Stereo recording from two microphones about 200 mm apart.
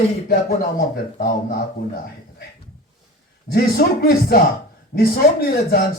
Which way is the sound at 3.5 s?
50° left (ahead or behind).